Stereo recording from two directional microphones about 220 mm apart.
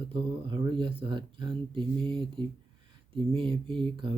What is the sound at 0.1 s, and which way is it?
Speech, 20° right (ahead or behind).